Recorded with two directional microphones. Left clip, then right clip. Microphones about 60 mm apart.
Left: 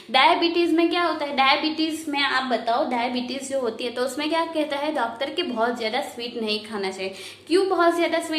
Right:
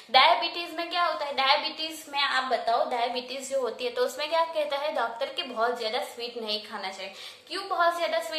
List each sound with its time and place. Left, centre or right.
0.1 s a woman's voice: right
0.5 s a woman's voice: centre
2.3 s a woman's voice: centre
3.6 s a woman's voice: right
6.4 s a woman's voice: centre
8.0 s a woman's voice: centre